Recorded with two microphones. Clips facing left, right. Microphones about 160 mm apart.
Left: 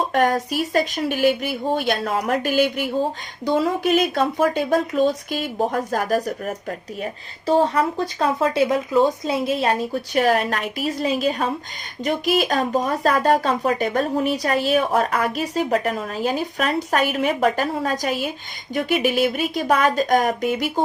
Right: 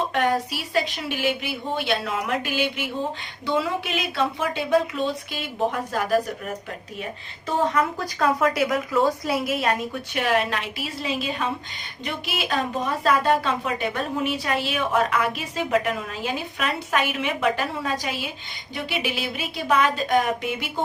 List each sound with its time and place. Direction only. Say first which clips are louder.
0.1 s speech: left 4 dB; 45° left (ahead or behind)